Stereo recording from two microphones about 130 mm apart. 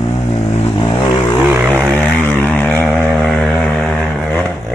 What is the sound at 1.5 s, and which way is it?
Vehicle, 15° right (ahead or behind).